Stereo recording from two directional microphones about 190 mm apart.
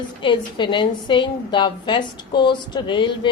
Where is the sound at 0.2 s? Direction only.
25° left (ahead or behind).